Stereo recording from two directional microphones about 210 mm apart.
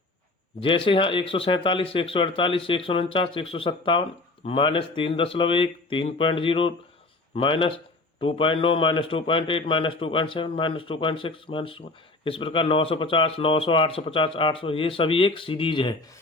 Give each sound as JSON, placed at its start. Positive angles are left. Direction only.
{"t": 0.6, "sound": "speech", "side_deg": 25}